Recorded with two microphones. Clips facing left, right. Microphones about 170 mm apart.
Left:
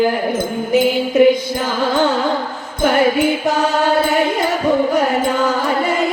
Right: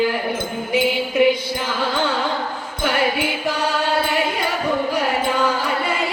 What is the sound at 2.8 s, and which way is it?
Music, 45° left (ahead or behind).